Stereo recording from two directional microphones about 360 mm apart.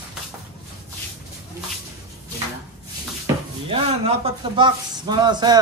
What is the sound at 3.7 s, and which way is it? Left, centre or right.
Speech, centre.